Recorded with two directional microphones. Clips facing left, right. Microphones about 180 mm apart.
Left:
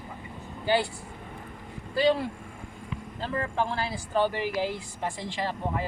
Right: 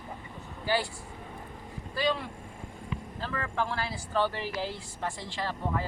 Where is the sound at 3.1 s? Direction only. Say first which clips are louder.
Left 4 dB; 25° left (ahead or behind).